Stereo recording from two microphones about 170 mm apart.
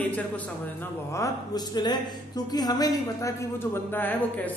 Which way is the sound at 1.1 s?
20° left (ahead or behind).